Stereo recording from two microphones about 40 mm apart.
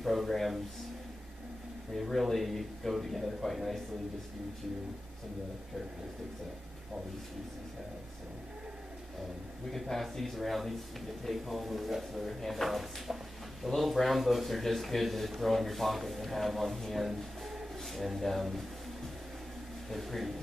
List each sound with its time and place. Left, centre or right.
0.0 s a man's voice: centre
2.0 s a man's voice: centre
9.7 s a man's voice: centre
19.9 s a man's voice: centre